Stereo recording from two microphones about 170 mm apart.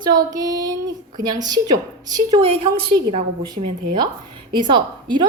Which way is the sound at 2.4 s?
35° right (ahead or behind).